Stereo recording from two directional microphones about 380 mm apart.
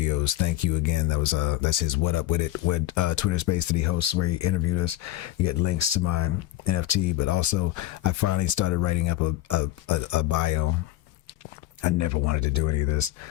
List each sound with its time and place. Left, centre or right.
0.0 s speech: left
11.9 s speech: left